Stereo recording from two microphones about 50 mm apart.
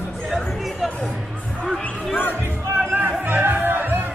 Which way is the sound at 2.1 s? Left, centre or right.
Left.